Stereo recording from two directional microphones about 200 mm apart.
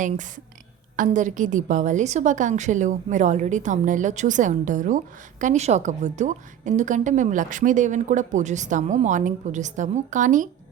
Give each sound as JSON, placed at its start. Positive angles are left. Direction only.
{"t": 0.9, "sound": "a woman's voice", "side_deg": -40}